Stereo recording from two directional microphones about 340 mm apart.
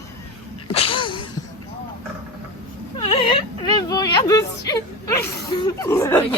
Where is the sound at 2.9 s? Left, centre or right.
Centre.